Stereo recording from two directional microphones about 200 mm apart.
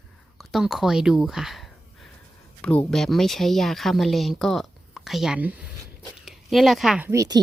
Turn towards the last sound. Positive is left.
turn(degrees=-15)  # may be behind; listen again after turning